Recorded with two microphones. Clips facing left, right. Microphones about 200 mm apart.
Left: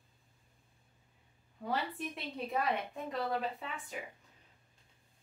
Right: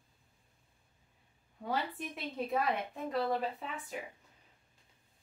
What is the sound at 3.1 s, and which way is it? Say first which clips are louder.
Speech: right 3 dB; centre (ahead or behind).